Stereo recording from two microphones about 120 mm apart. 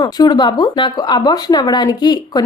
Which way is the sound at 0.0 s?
35° left (ahead or behind).